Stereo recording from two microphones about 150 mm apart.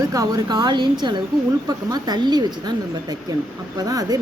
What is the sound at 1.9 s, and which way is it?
Speech, 30° right (ahead or behind).